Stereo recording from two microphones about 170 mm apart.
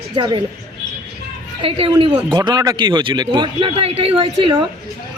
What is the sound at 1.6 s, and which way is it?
A woman's voice, 35° right (ahead or behind).